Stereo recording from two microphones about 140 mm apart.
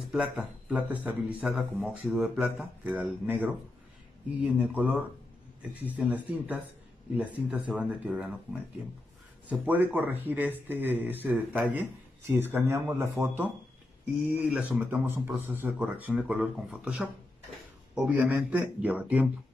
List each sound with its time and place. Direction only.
0.1 s speech: 5° right (ahead or behind)
9.5 s speech: 10° right (ahead or behind)